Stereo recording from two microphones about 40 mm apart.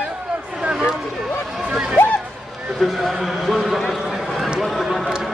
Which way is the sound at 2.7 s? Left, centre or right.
Centre.